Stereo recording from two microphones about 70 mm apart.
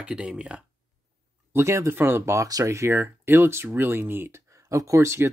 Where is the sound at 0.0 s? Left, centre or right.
Centre.